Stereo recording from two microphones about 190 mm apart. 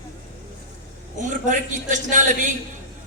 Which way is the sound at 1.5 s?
40° right (ahead or behind).